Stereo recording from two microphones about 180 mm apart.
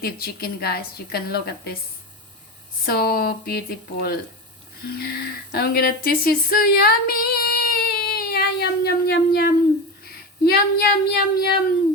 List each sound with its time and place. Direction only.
0.0 s a woman's voice: 60° left (ahead or behind)
2.8 s a woman's voice: 55° left (ahead or behind)
10.1 s a sound: 60° left (ahead or behind)